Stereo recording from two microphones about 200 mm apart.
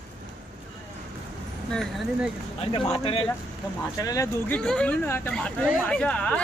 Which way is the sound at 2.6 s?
30° left (ahead or behind).